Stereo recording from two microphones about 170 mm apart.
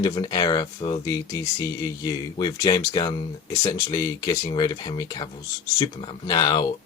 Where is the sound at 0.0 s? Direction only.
25° left (ahead or behind).